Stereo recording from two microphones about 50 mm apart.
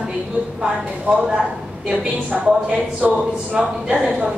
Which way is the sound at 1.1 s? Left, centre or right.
Right.